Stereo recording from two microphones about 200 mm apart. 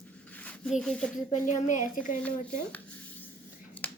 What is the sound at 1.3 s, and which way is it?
Speech, 40° left (ahead or behind).